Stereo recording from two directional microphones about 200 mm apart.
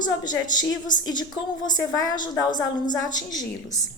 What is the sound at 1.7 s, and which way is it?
Speech, 20° left (ahead or behind).